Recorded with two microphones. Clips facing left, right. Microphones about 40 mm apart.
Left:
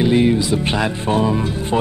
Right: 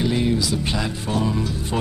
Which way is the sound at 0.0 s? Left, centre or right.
Left.